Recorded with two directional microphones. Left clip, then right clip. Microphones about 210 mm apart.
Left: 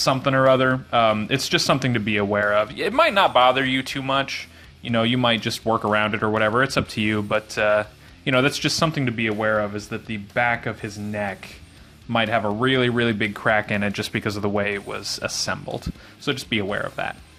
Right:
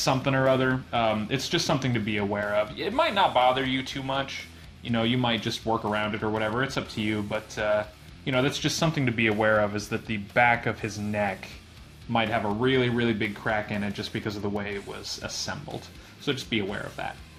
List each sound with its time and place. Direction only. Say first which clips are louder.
0.0 s speech: left 6 dB; 25° left (ahead or behind)
12.1 s speech: left 5 dB; 30° left (ahead or behind)